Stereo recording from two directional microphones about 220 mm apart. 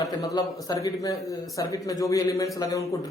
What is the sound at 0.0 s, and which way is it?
A man's voice, 15° left (ahead or behind).